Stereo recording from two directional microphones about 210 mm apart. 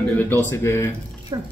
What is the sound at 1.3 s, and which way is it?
Speech, 20° right (ahead or behind).